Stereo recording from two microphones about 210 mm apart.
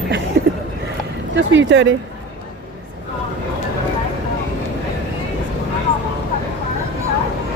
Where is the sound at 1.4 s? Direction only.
60° right (ahead or behind).